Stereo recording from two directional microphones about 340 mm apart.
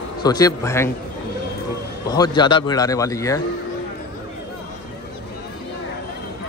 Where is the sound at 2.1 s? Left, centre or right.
Centre.